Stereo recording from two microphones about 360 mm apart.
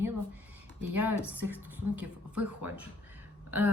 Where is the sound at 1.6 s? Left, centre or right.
Centre.